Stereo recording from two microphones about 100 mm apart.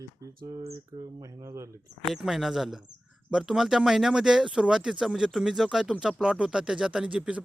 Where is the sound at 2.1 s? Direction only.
5° right (ahead or behind).